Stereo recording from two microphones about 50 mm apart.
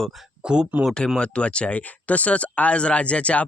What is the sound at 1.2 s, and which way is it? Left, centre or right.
Speech, left.